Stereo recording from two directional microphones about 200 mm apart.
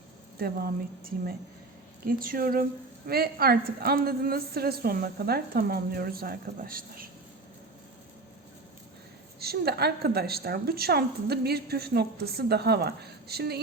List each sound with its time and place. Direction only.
0.3 s a woman's voice: 50° right (ahead or behind)
9.4 s a woman's voice: 50° right (ahead or behind)